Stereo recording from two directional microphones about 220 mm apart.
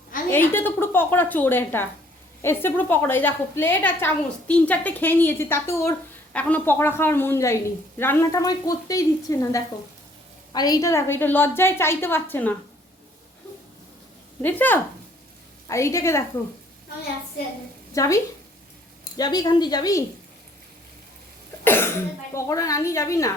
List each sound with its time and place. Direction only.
0.3 s a woman's voice: 10° left (ahead or behind)
14.4 s a woman's voice: 10° left (ahead or behind)
17.9 s a woman's voice: 15° left (ahead or behind)
21.6 s cough: 10° left (ahead or behind)
22.4 s a woman's voice: 15° left (ahead or behind)